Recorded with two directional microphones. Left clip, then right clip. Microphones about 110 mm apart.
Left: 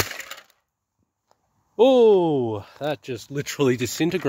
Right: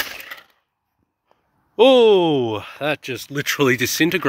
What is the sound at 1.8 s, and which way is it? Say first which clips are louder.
Speech: right 3 dB; 25° left (ahead or behind).